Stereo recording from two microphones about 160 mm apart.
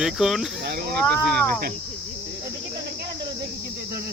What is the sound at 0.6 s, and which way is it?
Speech, 90° right.